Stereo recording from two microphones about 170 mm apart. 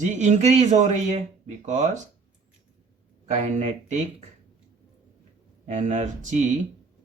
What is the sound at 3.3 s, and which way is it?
Speech, 45° right (ahead or behind).